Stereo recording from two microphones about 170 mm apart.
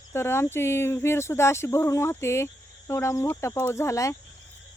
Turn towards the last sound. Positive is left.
turn(degrees=15)  # may be behind; listen again after turning